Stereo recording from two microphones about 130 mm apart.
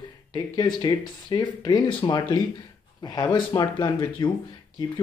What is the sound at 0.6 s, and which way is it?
Speech, 35° left (ahead or behind).